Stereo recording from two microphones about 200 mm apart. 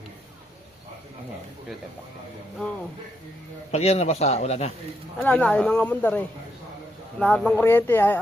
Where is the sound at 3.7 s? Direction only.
30° left (ahead or behind).